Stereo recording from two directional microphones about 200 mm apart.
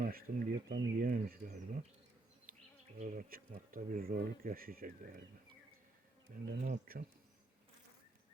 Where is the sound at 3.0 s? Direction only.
40° right (ahead or behind).